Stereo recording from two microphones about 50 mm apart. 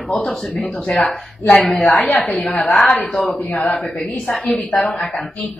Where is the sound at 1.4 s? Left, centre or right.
Left.